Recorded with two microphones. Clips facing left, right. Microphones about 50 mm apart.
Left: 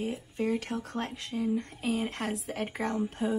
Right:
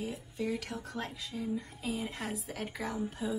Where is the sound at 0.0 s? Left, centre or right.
Left.